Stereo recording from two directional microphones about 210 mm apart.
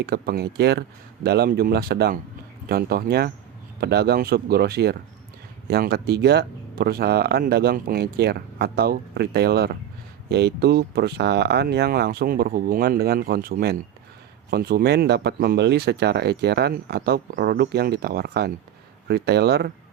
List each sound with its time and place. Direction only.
0.0 s speech: 50° right (ahead or behind)